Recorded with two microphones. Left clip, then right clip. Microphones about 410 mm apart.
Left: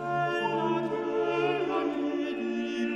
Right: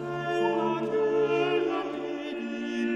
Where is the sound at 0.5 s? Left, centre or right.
Right.